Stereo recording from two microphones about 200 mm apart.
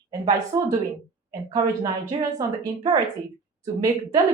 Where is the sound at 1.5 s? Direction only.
20° right (ahead or behind).